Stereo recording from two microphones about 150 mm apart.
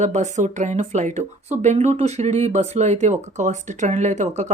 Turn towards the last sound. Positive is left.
turn(degrees=-50)  # may be behind; listen again after turning